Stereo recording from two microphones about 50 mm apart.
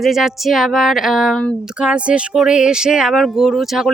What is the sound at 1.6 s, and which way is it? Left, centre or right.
Speech, right.